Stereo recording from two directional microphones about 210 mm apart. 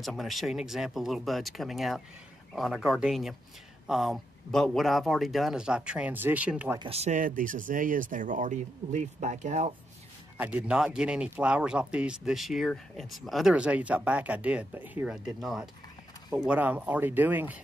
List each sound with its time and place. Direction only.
0.0 s speech: centre (ahead or behind)
6.8 s speech: 30° right (ahead or behind)
10.3 s speech: 5° right (ahead or behind)